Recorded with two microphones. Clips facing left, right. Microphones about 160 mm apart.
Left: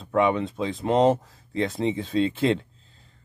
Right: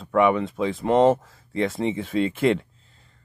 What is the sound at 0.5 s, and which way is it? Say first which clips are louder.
Speech: right 2 dB; 20° left (ahead or behind).